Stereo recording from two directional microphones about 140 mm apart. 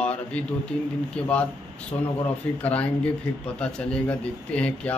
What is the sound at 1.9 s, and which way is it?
Speech, 25° left (ahead or behind).